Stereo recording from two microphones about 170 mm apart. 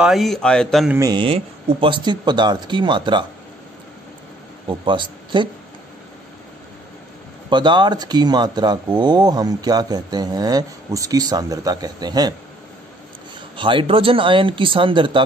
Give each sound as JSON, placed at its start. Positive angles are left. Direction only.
{"t": 0.0, "sound": "speech", "side_deg": 0}
{"t": 0.9, "sound": "speech", "side_deg": -20}
{"t": 1.2, "sound": "speech", "side_deg": -30}
{"t": 4.6, "sound": "speech", "side_deg": -30}
{"t": 7.4, "sound": "speech", "side_deg": -25}
{"t": 13.6, "sound": "speech", "side_deg": -30}